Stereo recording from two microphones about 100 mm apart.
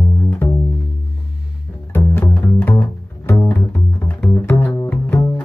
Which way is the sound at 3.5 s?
20° left (ahead or behind).